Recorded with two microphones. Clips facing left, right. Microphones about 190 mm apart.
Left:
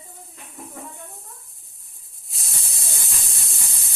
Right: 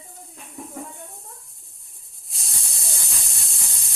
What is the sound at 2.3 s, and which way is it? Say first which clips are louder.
Hiss: left 1 dB; centre (ahead or behind).